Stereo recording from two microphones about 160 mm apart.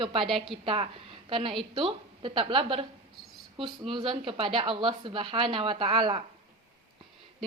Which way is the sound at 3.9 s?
30° right (ahead or behind).